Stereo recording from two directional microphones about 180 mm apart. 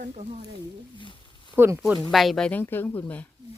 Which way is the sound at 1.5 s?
10° right (ahead or behind).